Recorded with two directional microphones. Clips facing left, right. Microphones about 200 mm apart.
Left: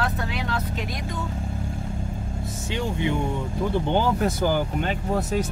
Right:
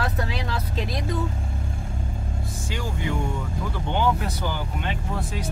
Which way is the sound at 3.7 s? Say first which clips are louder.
Left 2 dB; 35° left (ahead or behind).